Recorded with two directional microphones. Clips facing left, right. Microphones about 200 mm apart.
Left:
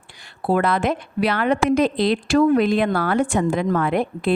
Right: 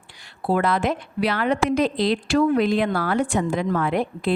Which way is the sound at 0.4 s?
55° left (ahead or behind).